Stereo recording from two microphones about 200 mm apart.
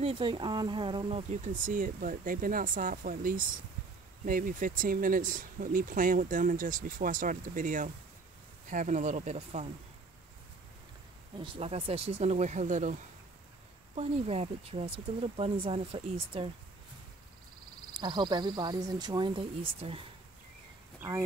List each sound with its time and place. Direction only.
0.0 s speech: 25° right (ahead or behind)
11.3 s speech: 25° right (ahead or behind)
13.9 s speech: 30° right (ahead or behind)
17.9 s speech: 20° right (ahead or behind)